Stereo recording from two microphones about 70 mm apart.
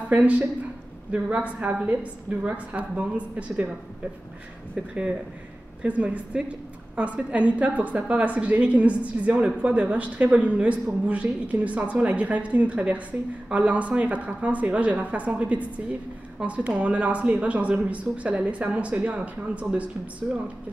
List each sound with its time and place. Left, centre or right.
0.1 s a woman's voice: centre
5.8 s a woman's voice: centre